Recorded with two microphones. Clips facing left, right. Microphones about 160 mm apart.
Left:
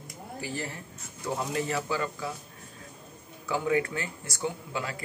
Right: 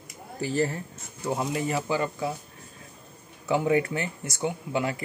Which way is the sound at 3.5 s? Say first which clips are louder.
Right 4 dB; 20° right (ahead or behind).